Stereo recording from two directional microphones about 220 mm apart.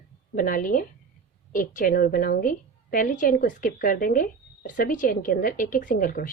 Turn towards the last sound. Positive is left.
turn(degrees=40)  # may be behind; listen again after turning